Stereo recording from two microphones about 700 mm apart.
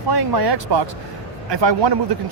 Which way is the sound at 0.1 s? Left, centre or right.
Right.